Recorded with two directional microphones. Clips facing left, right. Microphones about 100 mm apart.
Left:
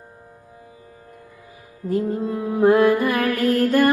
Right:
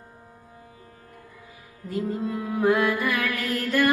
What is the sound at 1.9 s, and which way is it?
Music, 40° left (ahead or behind).